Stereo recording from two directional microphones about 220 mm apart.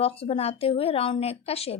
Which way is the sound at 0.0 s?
25° left (ahead or behind).